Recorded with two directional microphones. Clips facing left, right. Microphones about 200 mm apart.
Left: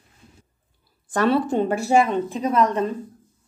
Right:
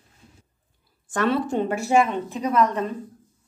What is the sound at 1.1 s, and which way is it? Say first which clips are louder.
A woman's voice: left 3 dB; 35° left (ahead or behind).